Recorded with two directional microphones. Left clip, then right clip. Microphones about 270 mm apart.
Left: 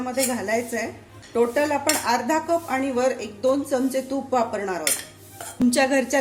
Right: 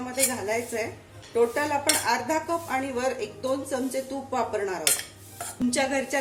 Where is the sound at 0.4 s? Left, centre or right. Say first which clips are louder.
Left 3 dB; left.